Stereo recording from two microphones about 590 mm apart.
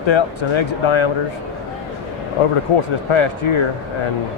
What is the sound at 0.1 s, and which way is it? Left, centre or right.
Speech, left.